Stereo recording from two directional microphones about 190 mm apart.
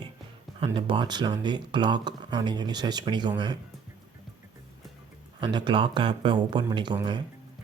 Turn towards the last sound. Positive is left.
turn(degrees=-25)  # may be behind; listen again after turning